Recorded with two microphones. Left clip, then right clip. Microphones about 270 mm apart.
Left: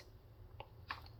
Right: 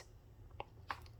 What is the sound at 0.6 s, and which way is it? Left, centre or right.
Chewing, centre.